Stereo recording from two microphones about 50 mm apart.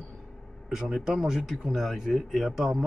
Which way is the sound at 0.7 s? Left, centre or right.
Centre.